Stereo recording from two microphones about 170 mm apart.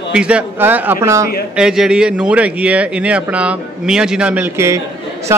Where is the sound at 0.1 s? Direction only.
5° right (ahead or behind).